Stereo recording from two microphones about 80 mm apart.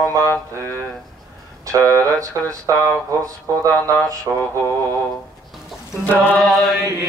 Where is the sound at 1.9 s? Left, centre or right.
Right.